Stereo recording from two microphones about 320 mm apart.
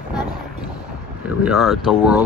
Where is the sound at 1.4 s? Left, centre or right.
Centre.